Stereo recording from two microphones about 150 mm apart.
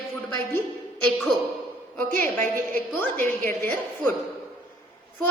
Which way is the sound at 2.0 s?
10° left (ahead or behind).